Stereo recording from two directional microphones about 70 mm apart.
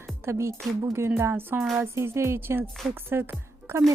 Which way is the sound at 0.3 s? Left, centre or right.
Right.